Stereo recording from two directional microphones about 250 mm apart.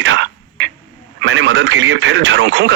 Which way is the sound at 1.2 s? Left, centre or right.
Right.